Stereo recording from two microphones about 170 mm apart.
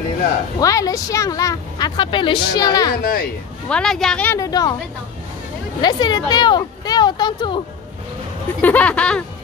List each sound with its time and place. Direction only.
0.6 s speech: 20° left (ahead or behind)
3.0 s speech: 60° left (ahead or behind)
3.6 s a woman's voice: 5° left (ahead or behind)
4.4 s speech: 20° left (ahead or behind)
5.8 s speech: 25° left (ahead or behind)
8.5 s speech: 10° left (ahead or behind)